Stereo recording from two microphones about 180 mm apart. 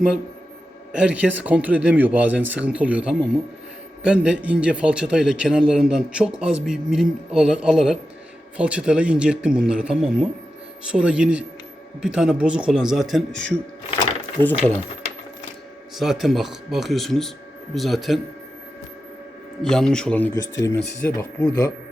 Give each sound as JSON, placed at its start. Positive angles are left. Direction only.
{"t": 0.9, "sound": "a man's voice", "side_deg": -5}
{"t": 16.0, "sound": "a man's voice", "side_deg": 0}
{"t": 19.6, "sound": "a man's voice", "side_deg": 5}
{"t": 20.3, "sound": "speech", "side_deg": 20}